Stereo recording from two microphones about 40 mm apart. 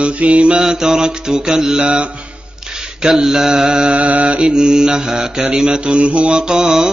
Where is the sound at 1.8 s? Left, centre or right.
Right.